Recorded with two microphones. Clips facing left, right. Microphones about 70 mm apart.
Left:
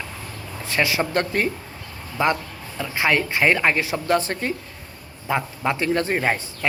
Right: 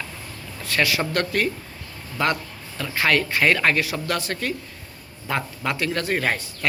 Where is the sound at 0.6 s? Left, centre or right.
Left.